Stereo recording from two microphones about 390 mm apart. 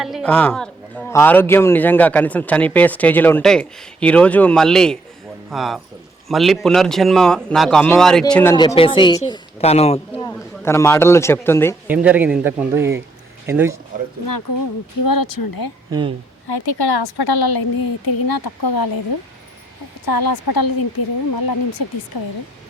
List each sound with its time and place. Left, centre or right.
0.0 s a man's voice: centre
11.9 s a man's voice: centre
14.3 s a woman's voice: left
15.9 s speech: centre
16.5 s a woman's voice: left
20.1 s a woman's voice: left